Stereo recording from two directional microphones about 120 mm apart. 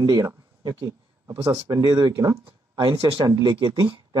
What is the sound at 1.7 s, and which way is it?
Speech, 30° right (ahead or behind).